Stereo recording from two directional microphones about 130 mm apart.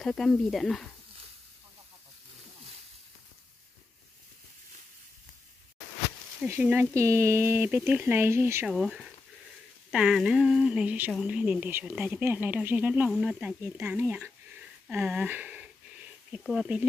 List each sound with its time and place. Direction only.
0.0 s speech: 5° left (ahead or behind)
6.4 s speech: 15° right (ahead or behind)
8.6 s speech: centre (ahead or behind)
14.9 s sniff: 10° right (ahead or behind)